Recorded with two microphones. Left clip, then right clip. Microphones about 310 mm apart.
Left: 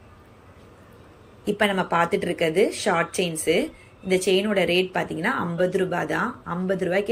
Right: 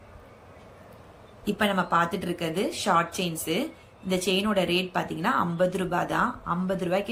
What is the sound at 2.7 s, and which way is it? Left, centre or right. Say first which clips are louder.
Speech: left 2 dB; centre.